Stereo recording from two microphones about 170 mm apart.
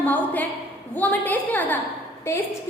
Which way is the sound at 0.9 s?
10° left (ahead or behind).